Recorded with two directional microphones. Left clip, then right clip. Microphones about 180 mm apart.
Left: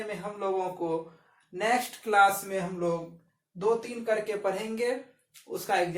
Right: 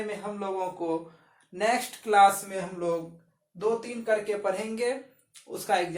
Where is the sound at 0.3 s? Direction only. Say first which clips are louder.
Left 3 dB; 25° right (ahead or behind).